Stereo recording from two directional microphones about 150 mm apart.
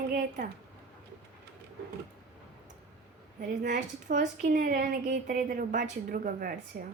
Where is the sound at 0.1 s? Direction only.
80° right.